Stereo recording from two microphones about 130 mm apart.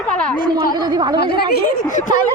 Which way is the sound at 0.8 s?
35° right (ahead or behind).